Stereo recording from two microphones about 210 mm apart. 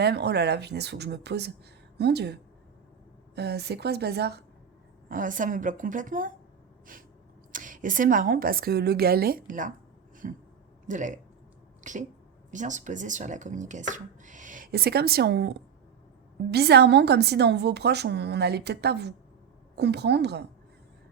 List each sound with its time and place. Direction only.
0.0 s a woman's voice: 50° right (ahead or behind)
5.0 s speech: 40° right (ahead or behind)
7.5 s a woman's voice: 40° right (ahead or behind)